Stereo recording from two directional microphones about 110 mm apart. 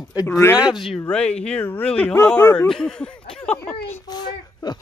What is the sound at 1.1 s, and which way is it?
Speech, 10° left (ahead or behind).